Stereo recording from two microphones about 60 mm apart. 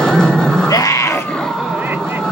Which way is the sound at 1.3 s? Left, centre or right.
Centre.